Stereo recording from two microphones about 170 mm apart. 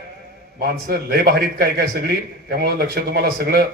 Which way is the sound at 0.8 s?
65° right (ahead or behind).